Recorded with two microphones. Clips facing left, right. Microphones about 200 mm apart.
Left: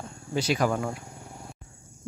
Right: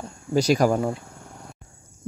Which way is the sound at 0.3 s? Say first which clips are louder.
Right 6 dB; 40° right (ahead or behind).